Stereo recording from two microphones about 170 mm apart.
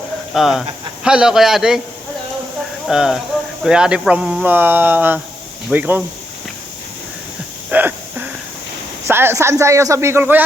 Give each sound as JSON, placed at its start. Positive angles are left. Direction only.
{"t": 0.3, "sound": "a man's voice", "side_deg": 0}
{"t": 2.8, "sound": "a man's voice", "side_deg": -5}
{"t": 7.7, "sound": "a sound", "side_deg": -10}
{"t": 9.0, "sound": "speech", "side_deg": -15}